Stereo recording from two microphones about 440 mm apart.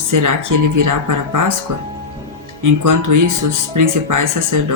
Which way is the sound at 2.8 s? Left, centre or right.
Right.